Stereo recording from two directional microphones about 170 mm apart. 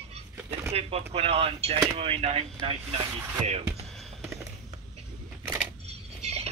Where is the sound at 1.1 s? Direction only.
35° right (ahead or behind).